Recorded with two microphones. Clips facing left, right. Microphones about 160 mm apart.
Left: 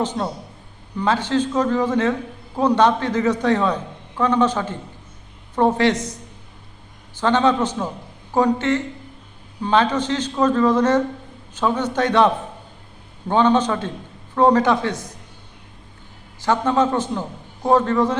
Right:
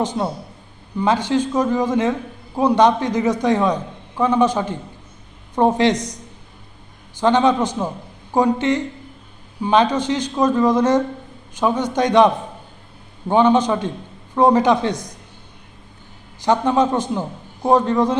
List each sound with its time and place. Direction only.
0.0 s a man's voice: 10° right (ahead or behind)
7.2 s a man's voice: 15° right (ahead or behind)
16.4 s a man's voice: 15° right (ahead or behind)